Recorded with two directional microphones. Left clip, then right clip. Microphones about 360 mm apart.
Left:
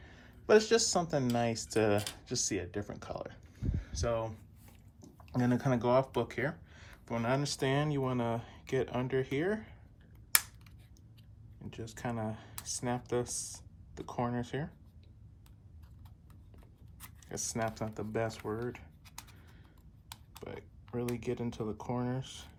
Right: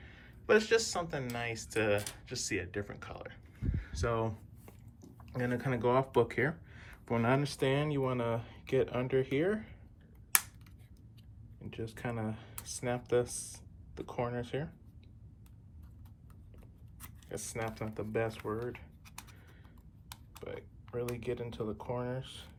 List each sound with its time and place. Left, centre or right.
0.0 s speech: centre
11.6 s speech: centre
17.0 s speech: centre
20.3 s speech: centre